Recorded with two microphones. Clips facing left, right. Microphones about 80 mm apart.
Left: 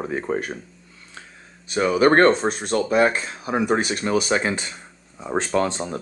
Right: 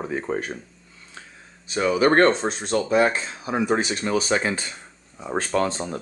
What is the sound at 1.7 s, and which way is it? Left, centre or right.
Speech, left.